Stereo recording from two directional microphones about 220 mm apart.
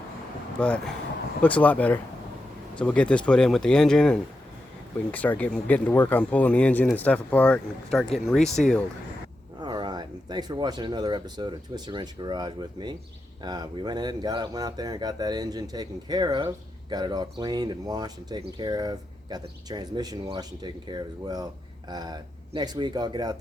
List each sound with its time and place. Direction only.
0.6 s speech: 5° left (ahead or behind)
9.6 s speech: 20° right (ahead or behind)